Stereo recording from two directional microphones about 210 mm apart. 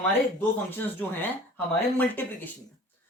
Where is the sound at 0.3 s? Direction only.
10° left (ahead or behind).